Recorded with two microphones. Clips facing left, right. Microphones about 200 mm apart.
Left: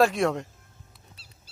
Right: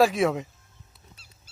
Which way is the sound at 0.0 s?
Centre (ahead or behind).